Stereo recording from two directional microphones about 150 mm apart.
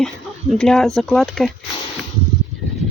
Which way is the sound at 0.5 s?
5° left (ahead or behind).